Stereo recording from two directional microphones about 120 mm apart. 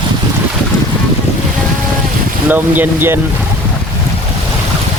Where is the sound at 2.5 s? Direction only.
15° right (ahead or behind).